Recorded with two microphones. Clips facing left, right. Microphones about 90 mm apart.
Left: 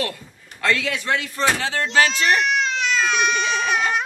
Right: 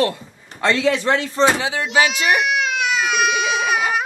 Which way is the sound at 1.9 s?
10° right (ahead or behind).